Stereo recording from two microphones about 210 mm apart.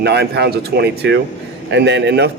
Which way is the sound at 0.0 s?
50° right (ahead or behind).